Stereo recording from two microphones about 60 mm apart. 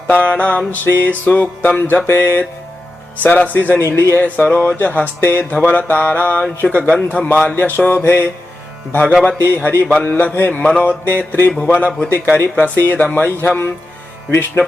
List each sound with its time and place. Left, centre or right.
0.1 s music: left
2.0 s speech: left
3.2 s music: left
3.8 s speech: left
4.2 s speech: left
6.6 s music: left
7.6 s speech: left
8.0 s speech: left
8.9 s music: left
10.5 s music: centre
11.0 s speech: left